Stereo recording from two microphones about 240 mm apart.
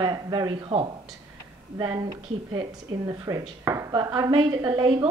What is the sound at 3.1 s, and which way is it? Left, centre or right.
Speech, centre.